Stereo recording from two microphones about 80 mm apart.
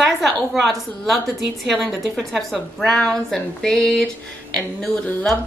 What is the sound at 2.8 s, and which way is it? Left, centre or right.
Speech, centre.